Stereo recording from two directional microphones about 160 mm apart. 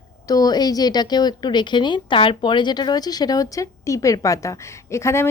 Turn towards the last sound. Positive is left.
turn(degrees=15)  # may be behind; listen again after turning